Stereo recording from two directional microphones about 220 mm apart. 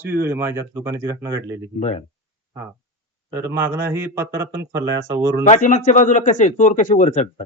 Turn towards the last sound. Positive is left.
turn(degrees=35)  # may be behind; listen again after turning